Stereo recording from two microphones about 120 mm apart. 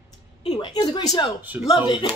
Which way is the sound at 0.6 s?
40° left (ahead or behind).